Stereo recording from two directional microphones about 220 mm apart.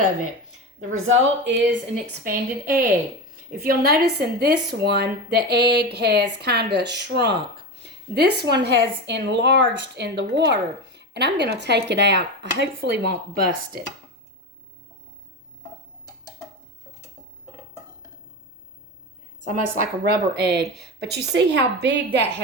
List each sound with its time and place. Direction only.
0.8 s a woman's voice: 70° right (ahead or behind)
2.2 s a woman's voice: 40° right (ahead or behind)
19.8 s a woman's voice: 45° right (ahead or behind)